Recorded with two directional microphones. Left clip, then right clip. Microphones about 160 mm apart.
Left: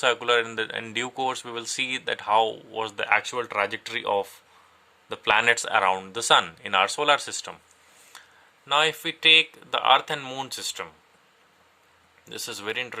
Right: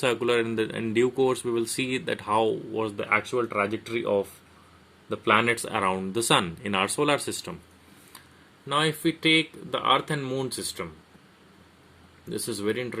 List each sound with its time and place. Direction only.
0.0 s speech: 25° left (ahead or behind)
2.9 s speech: 50° left (ahead or behind); by 7.5 s 30° left (ahead or behind)
8.6 s speech: 35° left (ahead or behind)
12.2 s speech: 40° left (ahead or behind)